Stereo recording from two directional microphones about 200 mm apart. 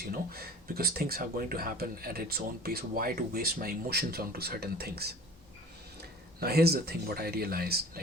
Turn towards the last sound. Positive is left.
turn(degrees=-50)  # may be behind; listen again after turning